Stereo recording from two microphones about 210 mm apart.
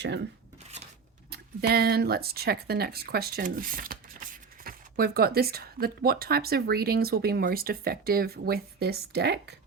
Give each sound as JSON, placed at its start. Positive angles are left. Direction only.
{"t": 1.3, "sound": "speech", "side_deg": -50}